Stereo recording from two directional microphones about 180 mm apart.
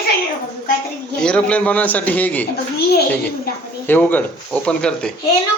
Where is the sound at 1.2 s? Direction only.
5° left (ahead or behind).